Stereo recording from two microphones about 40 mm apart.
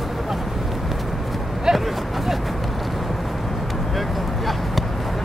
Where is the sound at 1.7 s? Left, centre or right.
Centre.